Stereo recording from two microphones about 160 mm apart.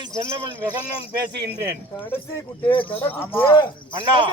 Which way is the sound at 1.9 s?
10° left (ahead or behind).